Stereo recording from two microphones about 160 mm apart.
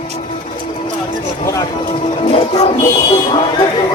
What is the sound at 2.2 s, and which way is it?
Music, 40° left (ahead or behind).